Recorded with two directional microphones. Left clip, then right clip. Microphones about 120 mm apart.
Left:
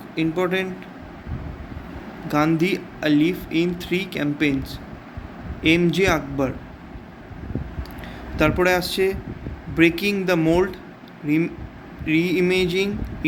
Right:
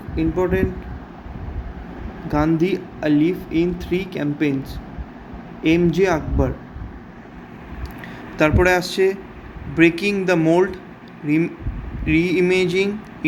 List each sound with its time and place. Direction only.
0.2 s speech: centre (ahead or behind)
2.2 s speech: centre (ahead or behind)
5.6 s speech: 5° right (ahead or behind)
8.4 s speech: 5° right (ahead or behind)